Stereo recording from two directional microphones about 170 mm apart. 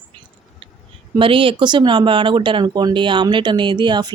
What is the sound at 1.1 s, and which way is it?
Speech, 30° right (ahead or behind).